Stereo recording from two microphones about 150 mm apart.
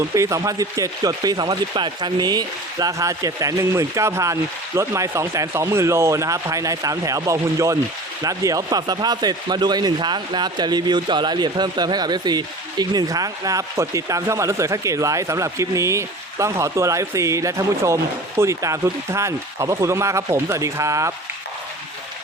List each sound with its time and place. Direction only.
0.1 s speech: 20° right (ahead or behind)